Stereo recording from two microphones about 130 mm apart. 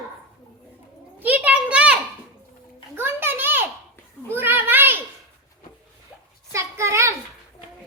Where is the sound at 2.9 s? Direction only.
15° right (ahead or behind).